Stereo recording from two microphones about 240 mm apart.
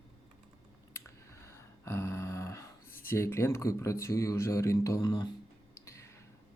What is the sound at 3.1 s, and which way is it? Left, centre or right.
Speech, centre.